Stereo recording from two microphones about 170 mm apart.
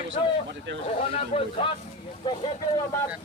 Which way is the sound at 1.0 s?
35° left (ahead or behind).